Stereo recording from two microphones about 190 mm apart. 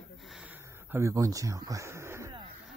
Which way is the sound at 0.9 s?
15° right (ahead or behind).